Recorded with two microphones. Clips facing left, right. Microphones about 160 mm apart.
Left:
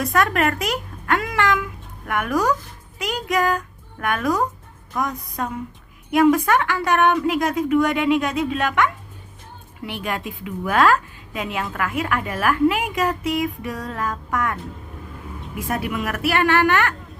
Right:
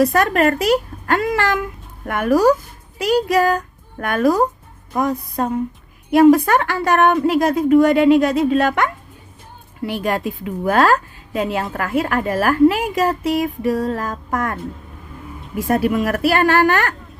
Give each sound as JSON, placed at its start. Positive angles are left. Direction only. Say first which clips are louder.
{"t": 0.0, "sound": "a child's voice", "louder": "right 5 dB", "side_deg": -30}
{"t": 15.6, "sound": "a woman's voice", "louder": "right 8 dB", "side_deg": -35}